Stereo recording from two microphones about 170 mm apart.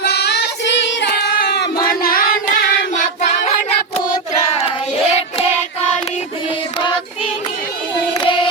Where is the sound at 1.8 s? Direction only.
60° left (ahead or behind).